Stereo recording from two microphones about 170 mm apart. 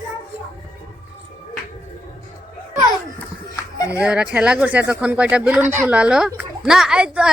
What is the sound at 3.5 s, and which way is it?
Music, 20° left (ahead or behind).